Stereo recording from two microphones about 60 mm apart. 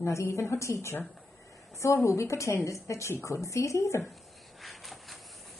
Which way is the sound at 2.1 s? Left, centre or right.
Left.